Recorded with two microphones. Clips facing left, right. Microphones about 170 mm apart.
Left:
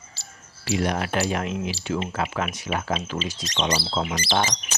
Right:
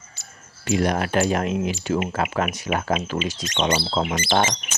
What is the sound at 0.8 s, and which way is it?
Speech, 45° right (ahead or behind).